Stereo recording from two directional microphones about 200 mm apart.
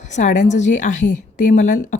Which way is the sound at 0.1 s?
40° left (ahead or behind).